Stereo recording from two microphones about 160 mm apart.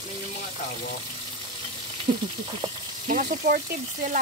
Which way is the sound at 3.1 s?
55° right (ahead or behind).